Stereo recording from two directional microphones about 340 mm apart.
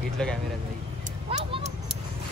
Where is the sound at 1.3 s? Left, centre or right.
Centre.